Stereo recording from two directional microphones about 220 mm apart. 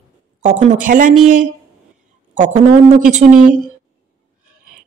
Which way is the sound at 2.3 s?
35° right (ahead or behind).